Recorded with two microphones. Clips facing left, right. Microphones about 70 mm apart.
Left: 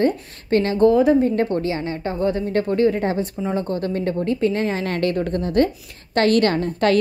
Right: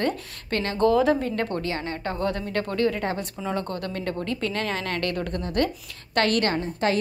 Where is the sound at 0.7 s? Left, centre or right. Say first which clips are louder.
Left 4 dB; centre.